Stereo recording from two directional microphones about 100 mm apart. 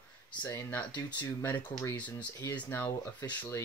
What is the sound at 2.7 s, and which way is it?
Speech, 25° left (ahead or behind).